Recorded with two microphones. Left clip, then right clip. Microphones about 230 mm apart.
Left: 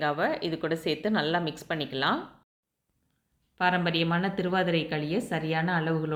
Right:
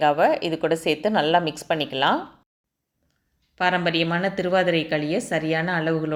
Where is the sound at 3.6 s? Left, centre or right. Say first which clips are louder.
Right 5 dB; centre.